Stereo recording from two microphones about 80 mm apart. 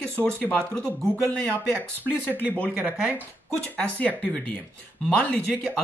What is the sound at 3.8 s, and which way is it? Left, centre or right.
Speech, centre.